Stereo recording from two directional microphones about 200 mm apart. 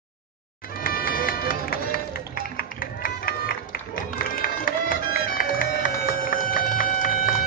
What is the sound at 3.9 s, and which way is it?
Run, 45° left (ahead or behind).